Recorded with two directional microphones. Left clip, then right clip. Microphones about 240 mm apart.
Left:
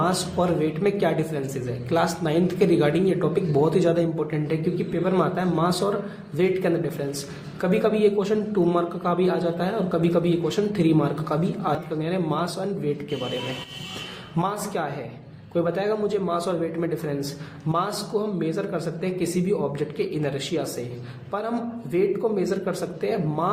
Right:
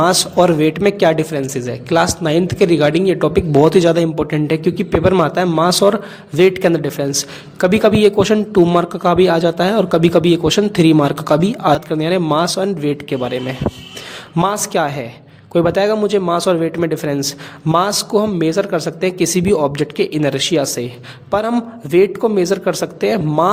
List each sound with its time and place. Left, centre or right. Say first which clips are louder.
0.0 s a woman's voice: right 11 dB; right
14.3 s a man's voice: right 11 dB; right